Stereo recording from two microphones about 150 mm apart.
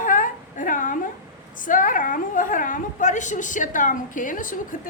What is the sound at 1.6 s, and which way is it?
A woman's voice, 60° left (ahead or behind).